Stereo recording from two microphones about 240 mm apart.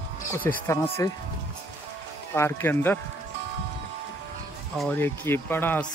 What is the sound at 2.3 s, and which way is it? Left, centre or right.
Speech, centre.